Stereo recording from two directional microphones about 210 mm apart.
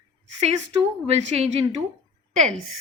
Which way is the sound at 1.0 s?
30° right (ahead or behind).